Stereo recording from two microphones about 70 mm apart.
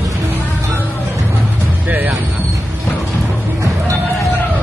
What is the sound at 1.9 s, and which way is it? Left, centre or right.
Music, right.